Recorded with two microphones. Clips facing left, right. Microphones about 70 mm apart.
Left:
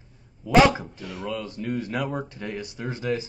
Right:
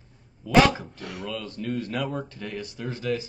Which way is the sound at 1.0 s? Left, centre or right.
Right.